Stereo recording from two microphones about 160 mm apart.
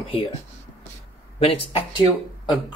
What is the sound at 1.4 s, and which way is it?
Speech, 35° left (ahead or behind).